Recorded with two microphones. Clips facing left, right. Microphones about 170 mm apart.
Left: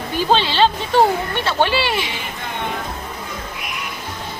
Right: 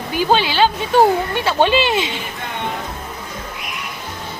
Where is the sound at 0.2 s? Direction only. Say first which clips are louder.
Right 1 dB; 5° right (ahead or behind).